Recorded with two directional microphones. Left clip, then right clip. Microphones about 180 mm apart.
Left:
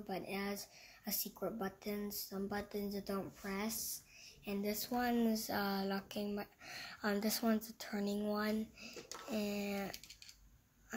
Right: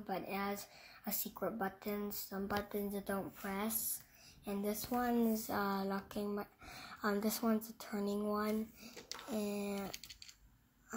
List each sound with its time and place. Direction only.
0.0 s a woman's voice: 10° left (ahead or behind)